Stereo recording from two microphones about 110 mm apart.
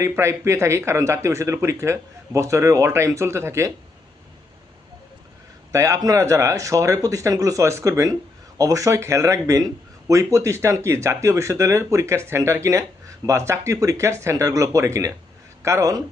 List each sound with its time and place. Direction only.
0.0 s a man's voice: 25° right (ahead or behind)
5.7 s a man's voice: 30° right (ahead or behind)